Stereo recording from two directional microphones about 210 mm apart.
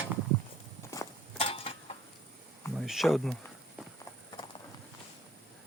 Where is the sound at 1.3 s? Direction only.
25° left (ahead or behind).